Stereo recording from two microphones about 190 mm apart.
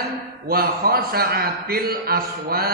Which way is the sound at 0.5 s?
55° right (ahead or behind).